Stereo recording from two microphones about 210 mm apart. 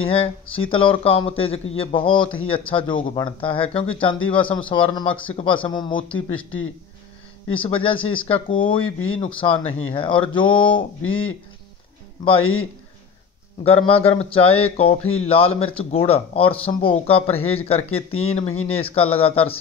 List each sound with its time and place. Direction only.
0.1 s speech: 25° left (ahead or behind)
7.5 s speech: 25° left (ahead or behind)
9.6 s speech: 70° left (ahead or behind)
9.8 s speech: 25° left (ahead or behind)
12.4 s speech: 75° left (ahead or behind)
13.7 s speech: 25° left (ahead or behind)